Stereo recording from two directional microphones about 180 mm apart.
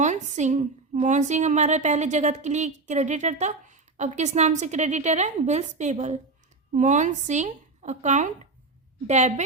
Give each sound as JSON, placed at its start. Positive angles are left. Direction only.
{"t": 0.0, "sound": "a woman's voice", "side_deg": -40}